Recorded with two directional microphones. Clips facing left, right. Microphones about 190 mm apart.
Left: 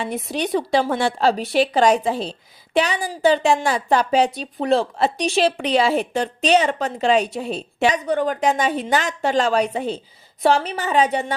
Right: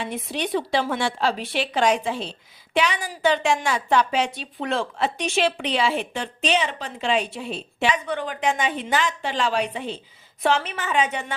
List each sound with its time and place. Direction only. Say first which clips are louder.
0.0 s a woman's voice: left 4 dB; 40° left (ahead or behind)